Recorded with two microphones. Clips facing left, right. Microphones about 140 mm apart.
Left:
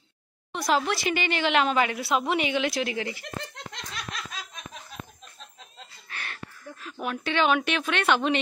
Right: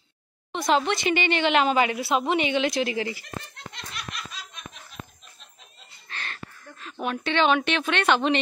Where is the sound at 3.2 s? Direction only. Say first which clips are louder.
Left 2 dB; 90° left.